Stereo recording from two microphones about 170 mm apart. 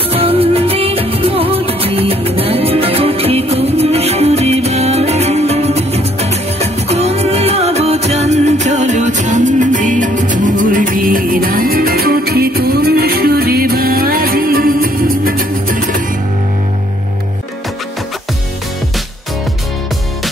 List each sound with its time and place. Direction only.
0.1 s music: 35° right (ahead or behind); by 16.0 s 55° right (ahead or behind)